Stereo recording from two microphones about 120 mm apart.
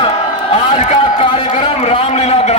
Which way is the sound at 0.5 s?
45° left (ahead or behind).